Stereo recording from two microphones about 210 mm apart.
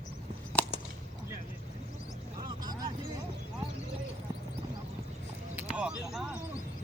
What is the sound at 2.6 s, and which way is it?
Vehicle, 20° right (ahead or behind).